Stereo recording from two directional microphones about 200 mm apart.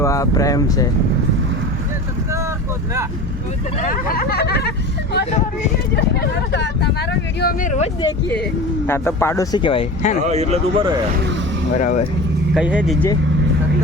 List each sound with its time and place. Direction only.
0.0 s speech: 15° left (ahead or behind)
3.8 s speech: 45° left (ahead or behind)
6.0 s speech: 55° left (ahead or behind)
7.3 s speech: 45° left (ahead or behind)
8.9 s speech: 10° left (ahead or behind); by 10.2 s 30° left (ahead or behind)
10.2 s speech: 35° right (ahead or behind)
11.8 s speech: 40° left (ahead or behind)
12.5 s speech: 5° right (ahead or behind)